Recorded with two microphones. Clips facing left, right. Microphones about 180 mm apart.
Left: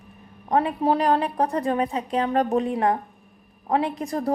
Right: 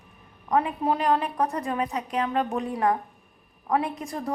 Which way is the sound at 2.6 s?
25° left (ahead or behind).